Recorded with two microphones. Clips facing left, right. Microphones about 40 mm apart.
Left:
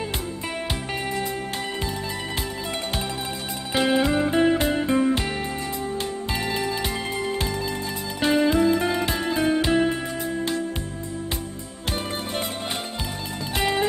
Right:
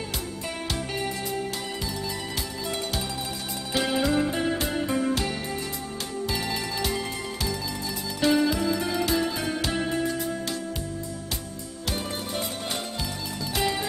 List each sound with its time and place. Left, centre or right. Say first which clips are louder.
3.7 s music: left 3 dB; left
6.3 s music: left 5 dB; left
7.3 s music: left 4 dB; left
13.6 s music: left 4 dB; left